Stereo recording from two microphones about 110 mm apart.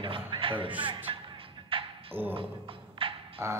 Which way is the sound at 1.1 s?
55° right (ahead or behind).